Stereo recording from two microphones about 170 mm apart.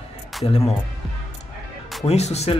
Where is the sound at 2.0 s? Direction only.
40° left (ahead or behind).